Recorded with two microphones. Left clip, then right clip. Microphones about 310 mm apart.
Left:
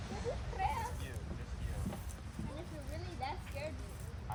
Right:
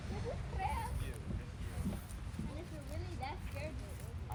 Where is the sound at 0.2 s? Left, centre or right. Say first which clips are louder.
Left 4 dB; left.